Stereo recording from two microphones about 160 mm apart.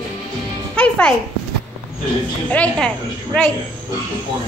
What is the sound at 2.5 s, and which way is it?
Speech, 5° left (ahead or behind).